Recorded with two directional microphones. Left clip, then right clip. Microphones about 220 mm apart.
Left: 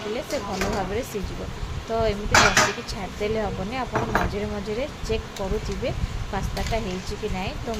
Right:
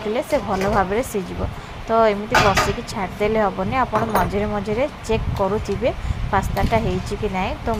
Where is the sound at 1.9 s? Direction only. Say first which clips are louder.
Right 6 dB; 15° right (ahead or behind).